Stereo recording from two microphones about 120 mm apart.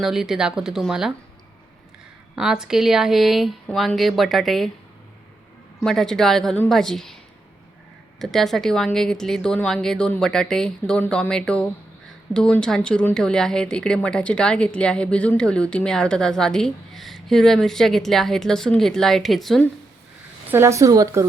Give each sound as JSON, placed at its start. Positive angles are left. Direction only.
{"t": 0.0, "sound": "speech", "side_deg": -5}
{"t": 2.3, "sound": "speech", "side_deg": -5}
{"t": 5.8, "sound": "speech", "side_deg": 5}
{"t": 8.2, "sound": "speech", "side_deg": 5}
{"t": 20.5, "sound": "speech", "side_deg": -20}